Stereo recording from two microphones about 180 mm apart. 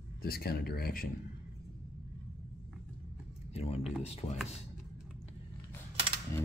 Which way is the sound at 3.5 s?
35° left (ahead or behind).